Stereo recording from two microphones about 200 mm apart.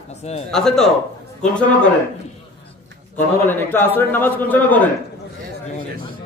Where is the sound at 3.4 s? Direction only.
10° left (ahead or behind).